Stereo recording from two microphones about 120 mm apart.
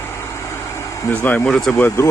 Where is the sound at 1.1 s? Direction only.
15° left (ahead or behind).